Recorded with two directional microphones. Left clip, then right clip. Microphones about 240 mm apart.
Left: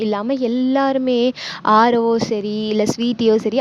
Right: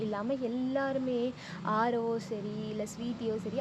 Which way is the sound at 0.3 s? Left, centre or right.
Left.